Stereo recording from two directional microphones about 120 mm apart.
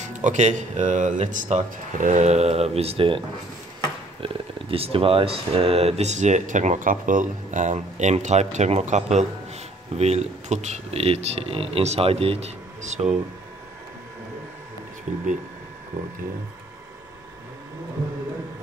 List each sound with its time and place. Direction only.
0.0 s speech: 85° right; by 3.2 s 50° right (ahead or behind)
4.2 s speech: 50° right (ahead or behind); by 13.1 s 70° right (ahead or behind)